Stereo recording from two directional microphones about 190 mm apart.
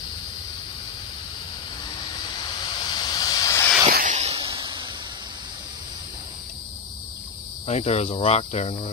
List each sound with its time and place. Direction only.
2.9 s vehicle: 20° left (ahead or behind)
3.9 s a sound: 40° right (ahead or behind)
7.6 s speech: 35° left (ahead or behind)